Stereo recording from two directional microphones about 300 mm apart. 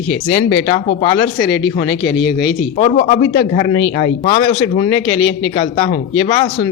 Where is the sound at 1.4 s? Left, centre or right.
Left.